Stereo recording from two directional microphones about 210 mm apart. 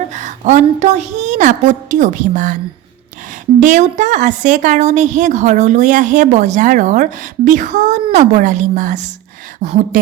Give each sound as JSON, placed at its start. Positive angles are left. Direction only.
{"t": 0.1, "sound": "a woman's voice", "side_deg": -35}
{"t": 3.6, "sound": "a woman's voice", "side_deg": -35}